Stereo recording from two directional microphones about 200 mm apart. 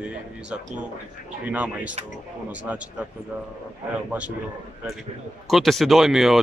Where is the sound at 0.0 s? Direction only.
5° right (ahead or behind).